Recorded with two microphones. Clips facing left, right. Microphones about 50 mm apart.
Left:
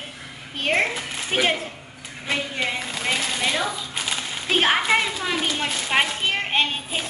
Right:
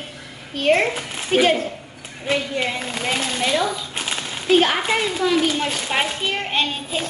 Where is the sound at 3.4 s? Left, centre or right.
Centre.